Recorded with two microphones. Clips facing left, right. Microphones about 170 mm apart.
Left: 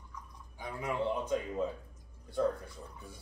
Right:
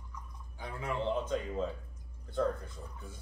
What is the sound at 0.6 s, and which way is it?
Speech, 10° left (ahead or behind).